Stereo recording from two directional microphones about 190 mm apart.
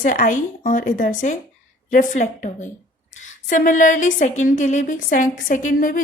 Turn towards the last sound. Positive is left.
turn(degrees=45)  # may be behind; listen again after turning